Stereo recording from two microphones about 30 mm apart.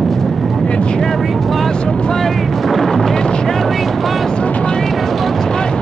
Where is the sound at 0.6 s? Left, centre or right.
Left.